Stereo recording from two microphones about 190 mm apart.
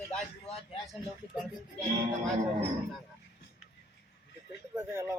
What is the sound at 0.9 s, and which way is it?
Speech, centre (ahead or behind).